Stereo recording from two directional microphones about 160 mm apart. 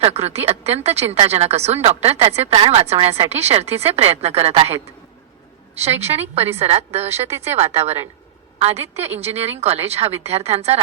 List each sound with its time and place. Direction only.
0.0 s speech: 40° right (ahead or behind)
7.1 s speech: 15° right (ahead or behind)
7.4 s speech: 40° right (ahead or behind)